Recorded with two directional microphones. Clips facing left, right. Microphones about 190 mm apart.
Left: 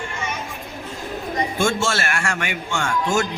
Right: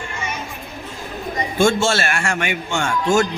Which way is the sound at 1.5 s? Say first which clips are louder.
Right 7 dB; 30° right (ahead or behind).